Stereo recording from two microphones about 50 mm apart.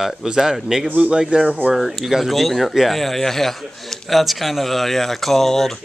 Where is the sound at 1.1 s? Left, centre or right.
Centre.